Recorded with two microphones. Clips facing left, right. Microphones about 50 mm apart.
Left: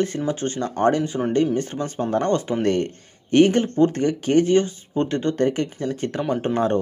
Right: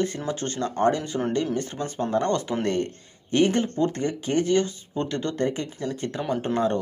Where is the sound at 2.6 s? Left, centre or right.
Left.